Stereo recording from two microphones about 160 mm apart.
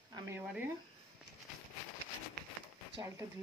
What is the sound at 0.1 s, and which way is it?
Speech, 15° right (ahead or behind).